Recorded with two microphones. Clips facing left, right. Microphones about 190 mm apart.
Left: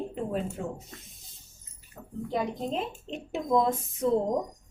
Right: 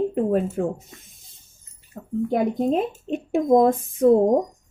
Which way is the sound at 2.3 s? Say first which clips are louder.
Right 9 dB; 55° right (ahead or behind).